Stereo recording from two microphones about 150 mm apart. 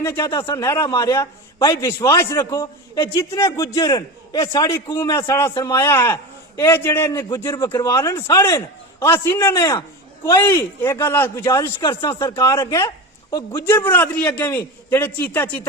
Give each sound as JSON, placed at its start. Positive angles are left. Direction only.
{"t": 0.0, "sound": "a man's voice", "side_deg": 15}
{"t": 0.3, "sound": "a man's voice", "side_deg": 30}
{"t": 0.6, "sound": "a man's voice", "side_deg": 20}